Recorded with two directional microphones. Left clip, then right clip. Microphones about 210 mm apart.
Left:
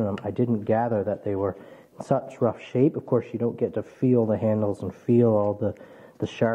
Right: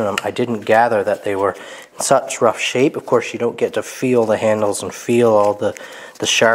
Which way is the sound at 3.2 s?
10° right (ahead or behind).